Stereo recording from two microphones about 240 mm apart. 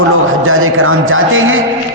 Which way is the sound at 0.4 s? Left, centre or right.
Right.